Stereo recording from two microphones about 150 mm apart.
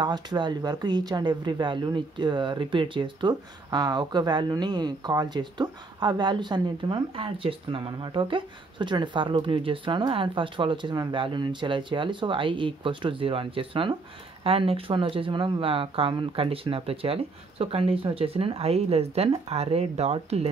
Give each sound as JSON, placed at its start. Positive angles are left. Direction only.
{"t": 0.0, "sound": "speech", "side_deg": -30}